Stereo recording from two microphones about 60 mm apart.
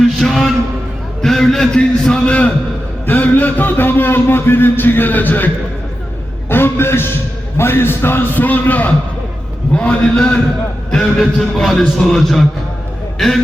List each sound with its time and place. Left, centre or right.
0.0 s a sound: centre
1.2 s a man's voice: centre; by 5.5 s left
6.5 s a man's voice: left
8.4 s a man's voice: left; by 13.4 s centre